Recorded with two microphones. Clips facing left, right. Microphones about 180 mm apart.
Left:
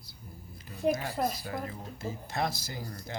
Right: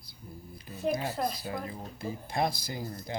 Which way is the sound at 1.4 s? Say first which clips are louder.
Even; 15° right (ahead or behind).